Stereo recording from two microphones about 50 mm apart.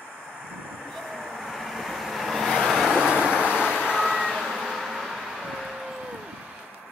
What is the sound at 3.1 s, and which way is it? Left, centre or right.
Vehicle, centre.